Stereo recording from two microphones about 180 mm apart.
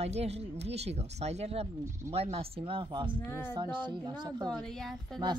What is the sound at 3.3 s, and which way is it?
Speech, 15° left (ahead or behind).